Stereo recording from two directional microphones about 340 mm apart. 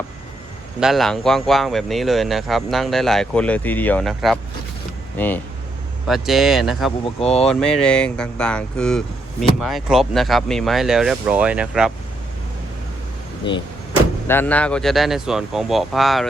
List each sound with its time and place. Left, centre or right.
0.8 s speech: centre
7.0 s speech: centre
7.4 s speech: centre
13.5 s speech: centre